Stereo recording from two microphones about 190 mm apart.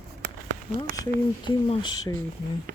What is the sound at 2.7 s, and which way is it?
Speech, 50° right (ahead or behind).